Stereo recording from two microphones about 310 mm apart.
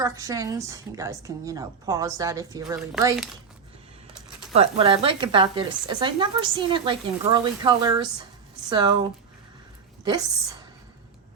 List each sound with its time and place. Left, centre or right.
0.0 s a woman's voice: centre
4.5 s a woman's voice: centre